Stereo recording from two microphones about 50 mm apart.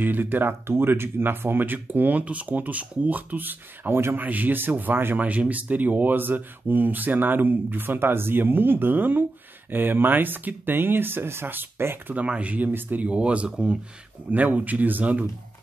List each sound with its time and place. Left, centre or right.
0.0 s speech: right
5.2 s speech: right
12.2 s speech: right
13.1 s speech: right
14.3 s speech: right